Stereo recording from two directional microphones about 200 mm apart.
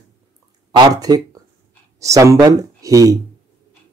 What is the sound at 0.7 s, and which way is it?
Speech, 20° right (ahead or behind).